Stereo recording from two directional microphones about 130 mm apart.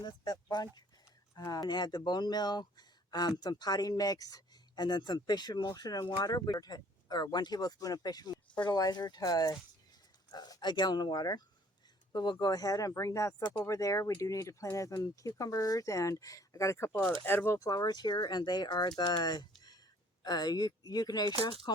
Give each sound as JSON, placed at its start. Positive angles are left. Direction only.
{"t": 0.5, "sound": "speech", "side_deg": 30}